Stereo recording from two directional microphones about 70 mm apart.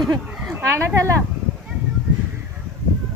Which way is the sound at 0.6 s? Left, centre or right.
Right.